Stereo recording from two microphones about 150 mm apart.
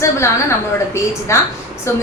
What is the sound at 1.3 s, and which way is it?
Speech, 20° left (ahead or behind).